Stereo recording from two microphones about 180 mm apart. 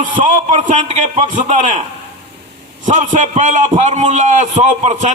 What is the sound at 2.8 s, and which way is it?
A man's voice, 45° right (ahead or behind).